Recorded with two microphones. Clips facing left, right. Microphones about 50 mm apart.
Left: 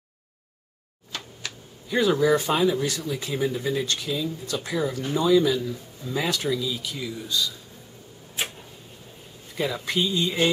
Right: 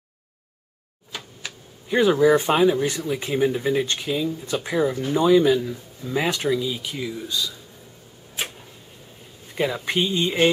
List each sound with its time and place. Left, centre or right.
1.1 s a sound: centre
1.9 s speech: right
9.8 s speech: right